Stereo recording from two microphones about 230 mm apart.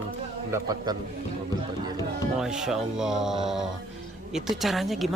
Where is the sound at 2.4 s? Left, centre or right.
Centre.